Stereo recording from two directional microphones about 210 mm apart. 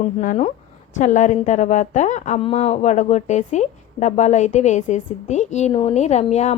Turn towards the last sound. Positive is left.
turn(degrees=30)  # may be behind; listen again after turning